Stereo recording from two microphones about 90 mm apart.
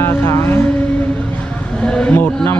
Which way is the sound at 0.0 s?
25° left (ahead or behind).